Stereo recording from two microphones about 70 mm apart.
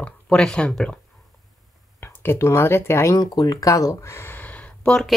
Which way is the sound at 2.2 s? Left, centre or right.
Left.